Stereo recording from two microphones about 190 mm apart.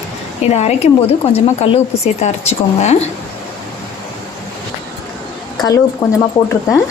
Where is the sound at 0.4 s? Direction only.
35° left (ahead or behind).